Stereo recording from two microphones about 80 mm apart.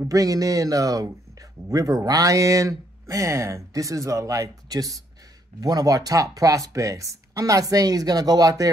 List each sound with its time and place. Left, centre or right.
0.1 s speech: right